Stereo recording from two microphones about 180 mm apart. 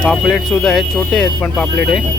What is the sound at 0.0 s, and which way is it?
Speech, centre (ahead or behind).